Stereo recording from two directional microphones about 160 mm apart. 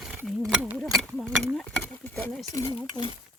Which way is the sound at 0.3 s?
5° right (ahead or behind).